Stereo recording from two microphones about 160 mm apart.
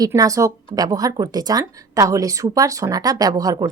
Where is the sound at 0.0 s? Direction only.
20° right (ahead or behind).